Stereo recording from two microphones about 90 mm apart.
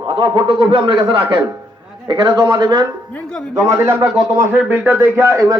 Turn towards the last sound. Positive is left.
turn(degrees=-35)  # may be behind; listen again after turning